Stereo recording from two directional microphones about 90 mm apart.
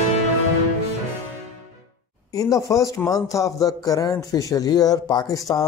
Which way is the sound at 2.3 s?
40° left (ahead or behind).